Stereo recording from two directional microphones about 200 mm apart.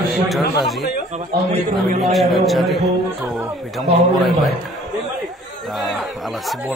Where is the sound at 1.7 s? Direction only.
30° right (ahead or behind).